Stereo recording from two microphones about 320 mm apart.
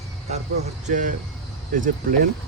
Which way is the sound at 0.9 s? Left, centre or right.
Right.